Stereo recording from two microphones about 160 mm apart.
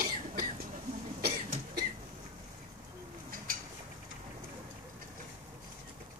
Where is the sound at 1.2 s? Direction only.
75° right (ahead or behind).